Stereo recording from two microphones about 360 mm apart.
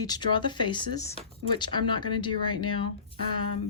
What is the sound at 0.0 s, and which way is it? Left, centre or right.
Speech, centre.